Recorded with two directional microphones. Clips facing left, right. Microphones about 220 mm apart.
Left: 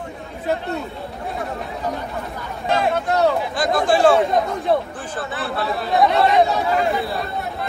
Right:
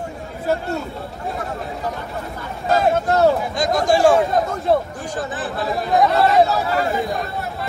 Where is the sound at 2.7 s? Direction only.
45° right (ahead or behind).